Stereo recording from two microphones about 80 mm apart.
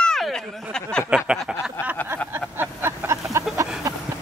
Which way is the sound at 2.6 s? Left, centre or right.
Right.